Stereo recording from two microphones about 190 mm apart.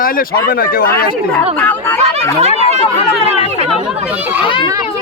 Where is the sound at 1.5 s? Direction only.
10° left (ahead or behind).